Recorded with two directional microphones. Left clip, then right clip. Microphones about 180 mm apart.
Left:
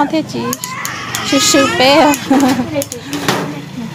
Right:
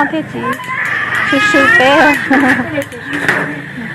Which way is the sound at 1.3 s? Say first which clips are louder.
Right 2 dB; 20° left (ahead or behind).